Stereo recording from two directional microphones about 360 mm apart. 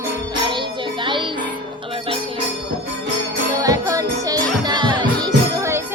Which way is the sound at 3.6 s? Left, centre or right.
Centre.